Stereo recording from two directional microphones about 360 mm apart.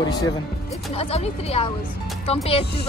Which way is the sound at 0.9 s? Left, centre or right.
Centre.